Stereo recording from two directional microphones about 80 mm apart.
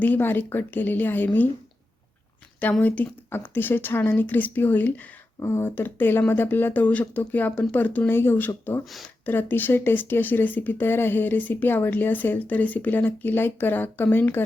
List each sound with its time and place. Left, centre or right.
0.0 s speech: left
2.8 s speech: left